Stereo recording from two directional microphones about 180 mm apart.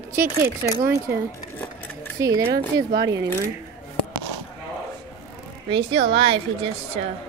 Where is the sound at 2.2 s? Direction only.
20° right (ahead or behind).